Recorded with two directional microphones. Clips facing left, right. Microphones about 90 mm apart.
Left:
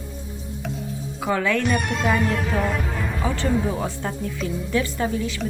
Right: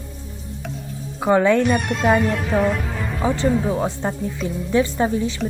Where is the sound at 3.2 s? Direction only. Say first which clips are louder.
Right 4 dB; 20° right (ahead or behind).